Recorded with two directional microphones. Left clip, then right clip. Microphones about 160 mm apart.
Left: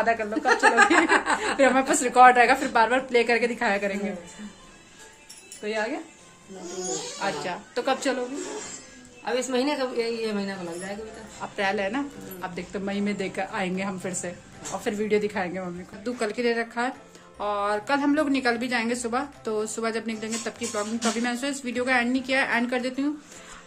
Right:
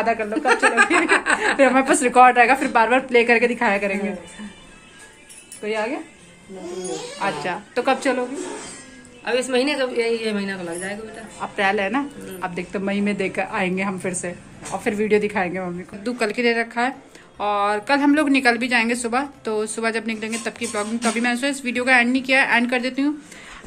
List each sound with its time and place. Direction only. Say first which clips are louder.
0.0 s speech: right 3 dB; 10° right (ahead or behind)
0.5 s a woman's voice: right 2 dB; 35° left (ahead or behind)
1.6 s speech: right 3 dB; 10° right (ahead or behind)
5.6 s a woman's voice: right 4 dB; centre (ahead or behind)
7.4 s speech: right 8 dB; 10° right (ahead or behind)
9.2 s a woman's voice: right 5 dB; 40° left (ahead or behind)
11.3 s a woman's voice: right 6 dB; 10° right (ahead or behind); by 23.1 s 10° left (ahead or behind)